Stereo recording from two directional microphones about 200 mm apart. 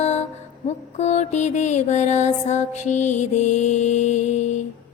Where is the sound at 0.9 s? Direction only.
35° left (ahead or behind).